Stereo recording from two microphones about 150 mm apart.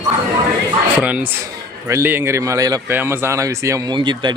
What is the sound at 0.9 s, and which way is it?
Speech, 10° right (ahead or behind).